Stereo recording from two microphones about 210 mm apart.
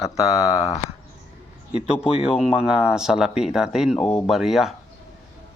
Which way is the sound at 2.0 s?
30° left (ahead or behind).